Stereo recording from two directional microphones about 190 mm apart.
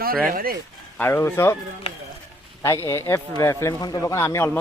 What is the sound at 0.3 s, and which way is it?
Speech, 50° right (ahead or behind).